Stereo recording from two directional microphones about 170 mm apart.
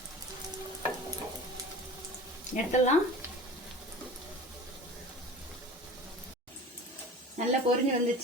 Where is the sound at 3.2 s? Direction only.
15° right (ahead or behind).